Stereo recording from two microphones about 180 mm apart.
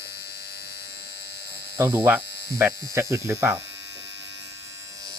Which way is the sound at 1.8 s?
10° right (ahead or behind).